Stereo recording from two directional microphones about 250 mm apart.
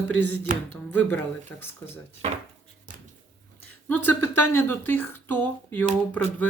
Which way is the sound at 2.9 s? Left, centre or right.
Right.